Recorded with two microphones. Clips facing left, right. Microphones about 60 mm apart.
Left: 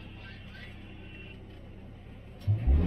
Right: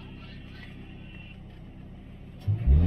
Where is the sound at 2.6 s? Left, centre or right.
Left.